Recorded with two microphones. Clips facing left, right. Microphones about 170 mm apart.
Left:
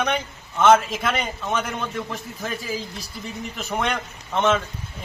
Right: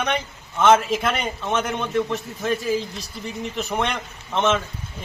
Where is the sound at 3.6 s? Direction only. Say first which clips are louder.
Even; centre (ahead or behind).